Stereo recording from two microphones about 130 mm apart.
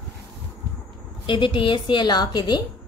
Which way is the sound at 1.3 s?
40° left (ahead or behind).